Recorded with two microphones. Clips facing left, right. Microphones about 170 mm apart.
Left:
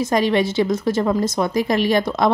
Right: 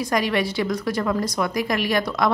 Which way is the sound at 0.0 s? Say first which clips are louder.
Left 4 dB; 25° left (ahead or behind).